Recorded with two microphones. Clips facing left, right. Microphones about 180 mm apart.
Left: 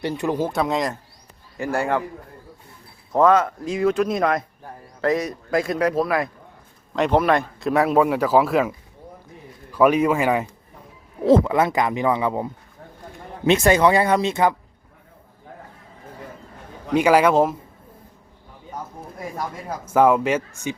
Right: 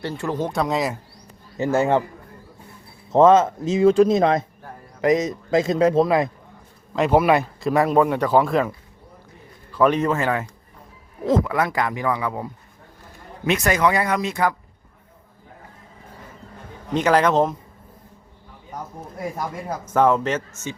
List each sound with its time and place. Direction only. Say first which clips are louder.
0.0 s speech: left 3 dB; 15° left (ahead or behind)
0.4 s speech: even; centre (ahead or behind)
1.5 s speech: right 4 dB; 20° right (ahead or behind)
3.1 s speech: right 3 dB; 25° right (ahead or behind)
6.9 s speech: right 1 dB; 5° right (ahead or behind)
9.7 s speech: left 2 dB; 10° left (ahead or behind)
11.3 s speech: left 4 dB; 25° left (ahead or behind)
16.9 s speech: left 2 dB; 10° left (ahead or behind)
19.8 s speech: left 2 dB; 10° left (ahead or behind)